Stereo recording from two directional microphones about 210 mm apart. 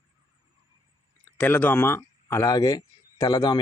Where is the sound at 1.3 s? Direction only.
10° left (ahead or behind).